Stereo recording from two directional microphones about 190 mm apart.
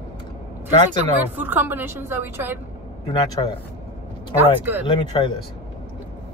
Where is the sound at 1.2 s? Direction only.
10° right (ahead or behind).